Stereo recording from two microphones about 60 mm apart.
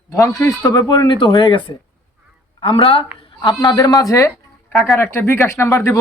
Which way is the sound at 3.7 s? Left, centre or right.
Left.